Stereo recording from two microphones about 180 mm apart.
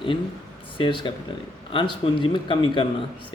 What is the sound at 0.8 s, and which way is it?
Speech, 25° left (ahead or behind).